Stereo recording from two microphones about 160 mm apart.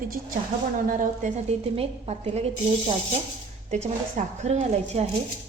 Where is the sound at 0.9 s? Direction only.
60° right (ahead or behind).